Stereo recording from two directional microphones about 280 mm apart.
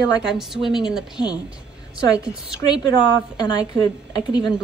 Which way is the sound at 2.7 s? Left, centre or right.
Centre.